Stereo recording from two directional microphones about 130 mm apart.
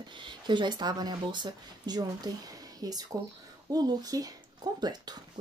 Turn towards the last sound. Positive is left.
turn(degrees=-30)  # may be behind; listen again after turning